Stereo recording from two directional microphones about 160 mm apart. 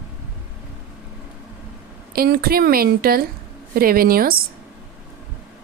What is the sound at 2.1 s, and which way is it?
A woman's voice, 70° right (ahead or behind).